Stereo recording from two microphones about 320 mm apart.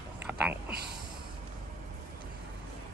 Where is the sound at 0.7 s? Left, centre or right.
Right.